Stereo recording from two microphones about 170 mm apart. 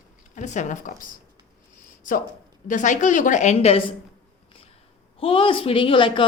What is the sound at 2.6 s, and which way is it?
A woman's voice, 45° left (ahead or behind).